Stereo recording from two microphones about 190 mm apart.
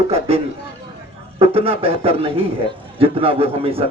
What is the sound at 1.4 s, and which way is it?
A man's voice, 30° right (ahead or behind).